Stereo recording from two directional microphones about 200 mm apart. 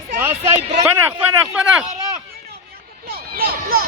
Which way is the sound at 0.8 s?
5° right (ahead or behind).